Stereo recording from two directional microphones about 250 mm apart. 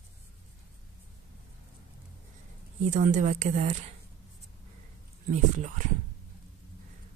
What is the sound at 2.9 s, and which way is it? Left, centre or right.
Speech, right.